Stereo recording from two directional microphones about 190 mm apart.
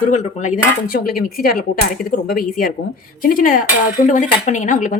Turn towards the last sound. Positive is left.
turn(degrees=40)  # may be behind; listen again after turning